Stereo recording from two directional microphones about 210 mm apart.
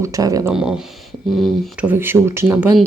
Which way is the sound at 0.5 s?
5° right (ahead or behind).